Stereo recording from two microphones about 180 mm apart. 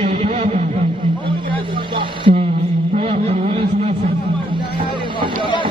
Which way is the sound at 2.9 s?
35° right (ahead or behind).